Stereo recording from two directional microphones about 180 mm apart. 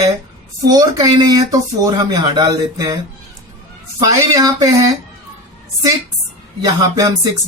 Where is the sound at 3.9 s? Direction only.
20° right (ahead or behind).